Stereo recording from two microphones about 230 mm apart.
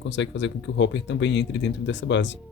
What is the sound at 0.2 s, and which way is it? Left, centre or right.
Speech, left.